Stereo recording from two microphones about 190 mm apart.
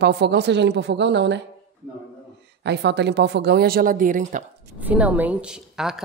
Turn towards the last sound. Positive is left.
turn(degrees=0)  # may be behind; listen again after turning